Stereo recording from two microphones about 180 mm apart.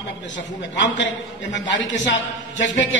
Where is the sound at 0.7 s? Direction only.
80° left.